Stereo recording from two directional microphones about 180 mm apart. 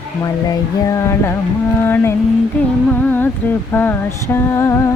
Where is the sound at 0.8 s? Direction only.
15° left (ahead or behind).